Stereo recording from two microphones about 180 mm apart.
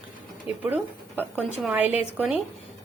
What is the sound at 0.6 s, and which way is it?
Speech, 10° right (ahead or behind).